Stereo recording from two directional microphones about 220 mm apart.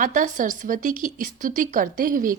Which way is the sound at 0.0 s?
35° right (ahead or behind).